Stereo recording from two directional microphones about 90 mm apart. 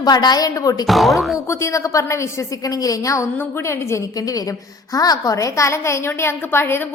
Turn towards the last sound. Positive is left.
turn(degrees=25)  # may be behind; listen again after turning